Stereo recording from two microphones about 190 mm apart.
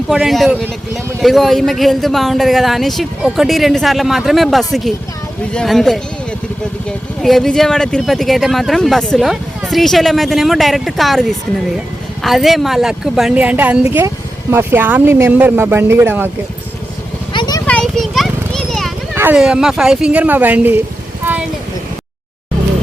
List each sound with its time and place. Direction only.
0.1 s speech: centre (ahead or behind)
7.2 s speech: centre (ahead or behind)
17.3 s vehicle: 20° left (ahead or behind)
17.7 s a sound: 5° left (ahead or behind)
19.1 s speech: 10° right (ahead or behind)